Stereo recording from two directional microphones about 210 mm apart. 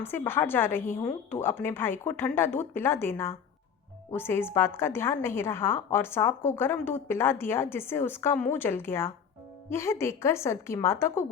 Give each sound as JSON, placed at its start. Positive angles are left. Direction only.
{"t": 0.0, "sound": "a woman's voice", "side_deg": 10}